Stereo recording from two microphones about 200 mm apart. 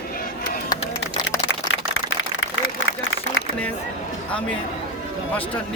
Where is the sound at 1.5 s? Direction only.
70° left (ahead or behind).